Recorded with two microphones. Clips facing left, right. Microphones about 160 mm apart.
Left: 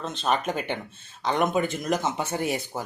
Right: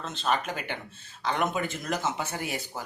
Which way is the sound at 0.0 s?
20° left (ahead or behind).